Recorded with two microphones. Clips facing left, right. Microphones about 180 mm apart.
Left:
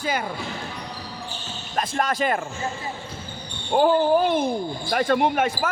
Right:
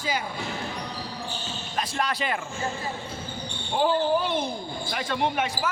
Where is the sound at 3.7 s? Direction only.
50° left (ahead or behind).